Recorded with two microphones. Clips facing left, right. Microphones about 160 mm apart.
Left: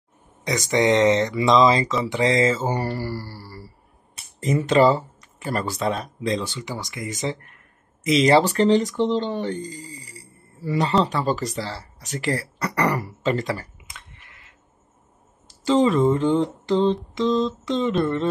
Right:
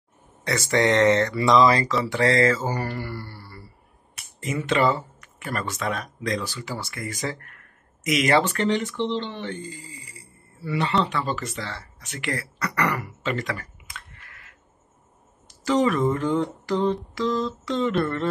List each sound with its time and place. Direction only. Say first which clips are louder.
0.4 s speech: left 1 dB; 15° left (ahead or behind)
2.0 s mantra: even; 20° left (ahead or behind)
13.9 s a sound: right 4 dB; 20° left (ahead or behind)
15.4 s speech: left 3 dB; 25° left (ahead or behind)